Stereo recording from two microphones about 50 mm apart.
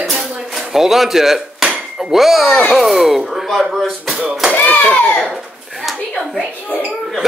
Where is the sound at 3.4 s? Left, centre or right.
Centre.